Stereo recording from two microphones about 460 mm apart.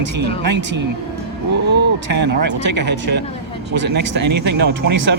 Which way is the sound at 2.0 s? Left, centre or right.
Right.